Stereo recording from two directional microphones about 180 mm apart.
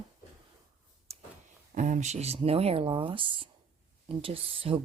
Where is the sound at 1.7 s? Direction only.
45° right (ahead or behind).